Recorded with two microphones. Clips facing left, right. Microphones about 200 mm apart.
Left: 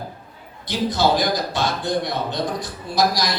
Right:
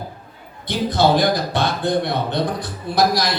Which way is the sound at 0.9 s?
60° right (ahead or behind).